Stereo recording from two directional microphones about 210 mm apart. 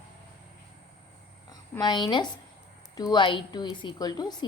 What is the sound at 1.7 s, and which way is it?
A woman's voice, 20° left (ahead or behind).